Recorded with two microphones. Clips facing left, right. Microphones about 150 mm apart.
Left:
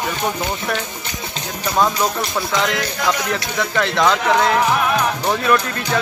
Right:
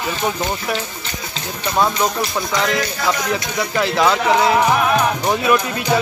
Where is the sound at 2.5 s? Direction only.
Centre (ahead or behind).